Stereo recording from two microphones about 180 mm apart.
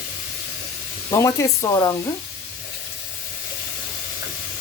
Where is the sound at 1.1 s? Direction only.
15° left (ahead or behind).